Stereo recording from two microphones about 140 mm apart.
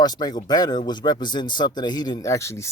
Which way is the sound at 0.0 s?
30° left (ahead or behind).